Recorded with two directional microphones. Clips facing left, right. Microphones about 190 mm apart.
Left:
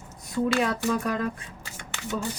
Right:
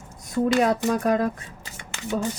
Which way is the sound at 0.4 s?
35° right (ahead or behind).